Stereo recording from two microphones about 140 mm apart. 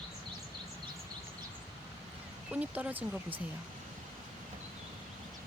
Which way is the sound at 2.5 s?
10° right (ahead or behind).